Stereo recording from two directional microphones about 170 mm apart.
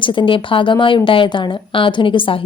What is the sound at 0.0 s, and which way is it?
A woman's voice, 30° left (ahead or behind).